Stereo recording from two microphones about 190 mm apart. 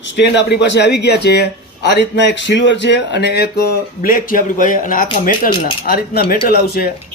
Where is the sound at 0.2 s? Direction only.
65° left (ahead or behind).